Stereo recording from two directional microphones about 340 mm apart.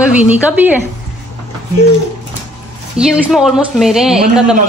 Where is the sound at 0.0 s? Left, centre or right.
Centre.